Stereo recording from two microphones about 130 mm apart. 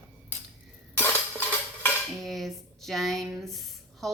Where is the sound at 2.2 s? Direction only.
Centre (ahead or behind).